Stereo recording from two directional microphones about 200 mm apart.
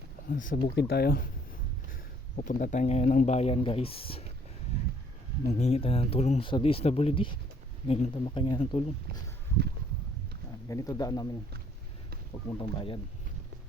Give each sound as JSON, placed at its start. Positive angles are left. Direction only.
{"t": 0.3, "sound": "speech", "side_deg": 45}
{"t": 5.5, "sound": "speech", "side_deg": 35}
{"t": 10.7, "sound": "speech", "side_deg": 15}
{"t": 12.5, "sound": "speech", "side_deg": 25}